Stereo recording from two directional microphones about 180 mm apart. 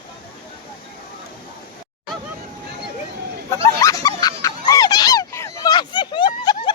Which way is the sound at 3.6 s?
15° left (ahead or behind).